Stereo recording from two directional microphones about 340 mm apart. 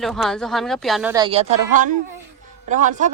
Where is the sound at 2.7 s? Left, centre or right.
Right.